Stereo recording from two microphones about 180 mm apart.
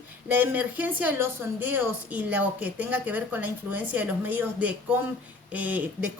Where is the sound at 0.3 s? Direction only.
10° right (ahead or behind).